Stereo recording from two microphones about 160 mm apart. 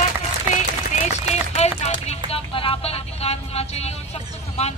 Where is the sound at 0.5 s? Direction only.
45° left (ahead or behind).